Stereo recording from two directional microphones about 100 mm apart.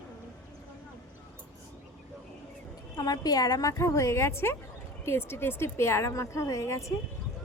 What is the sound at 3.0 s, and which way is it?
A woman's voice, 40° left (ahead or behind).